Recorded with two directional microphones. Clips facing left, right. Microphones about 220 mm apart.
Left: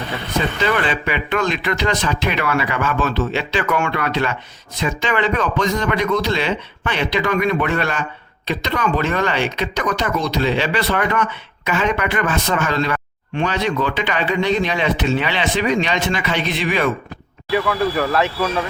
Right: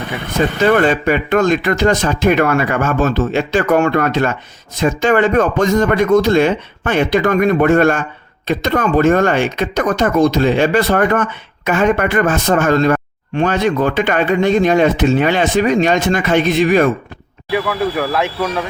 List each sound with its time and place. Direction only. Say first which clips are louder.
0.3 s speech: right 7 dB; 45° right (ahead or behind)
17.5 s speech: right 1 dB; 5° right (ahead or behind)